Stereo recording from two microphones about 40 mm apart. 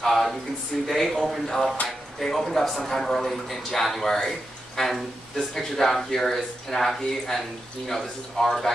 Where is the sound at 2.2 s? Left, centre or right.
Centre.